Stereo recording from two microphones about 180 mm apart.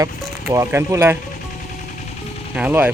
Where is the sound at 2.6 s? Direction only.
10° right (ahead or behind).